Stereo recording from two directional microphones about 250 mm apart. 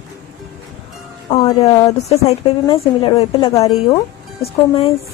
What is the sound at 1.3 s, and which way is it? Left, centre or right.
A woman's voice, centre.